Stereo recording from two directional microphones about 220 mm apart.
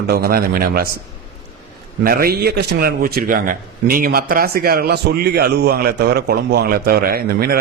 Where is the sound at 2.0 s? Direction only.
45° right (ahead or behind).